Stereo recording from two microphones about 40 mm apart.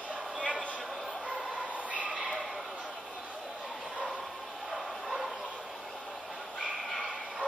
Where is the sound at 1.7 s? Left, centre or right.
Right.